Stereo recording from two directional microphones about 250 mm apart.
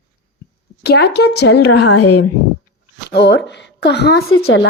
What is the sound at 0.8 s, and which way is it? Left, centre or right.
A woman's voice, left.